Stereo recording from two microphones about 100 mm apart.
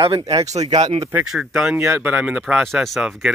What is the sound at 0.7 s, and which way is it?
Speech, 45° right (ahead or behind).